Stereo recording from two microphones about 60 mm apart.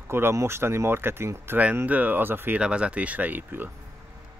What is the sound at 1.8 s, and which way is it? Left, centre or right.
Speech, right.